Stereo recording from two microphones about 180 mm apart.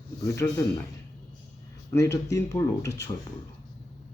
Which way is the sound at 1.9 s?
15° left (ahead or behind).